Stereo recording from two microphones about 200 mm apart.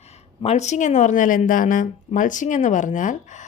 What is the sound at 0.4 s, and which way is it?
Speech, 35° left (ahead or behind).